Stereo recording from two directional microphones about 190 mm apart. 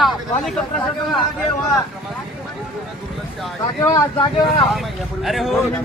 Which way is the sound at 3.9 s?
25° left (ahead or behind).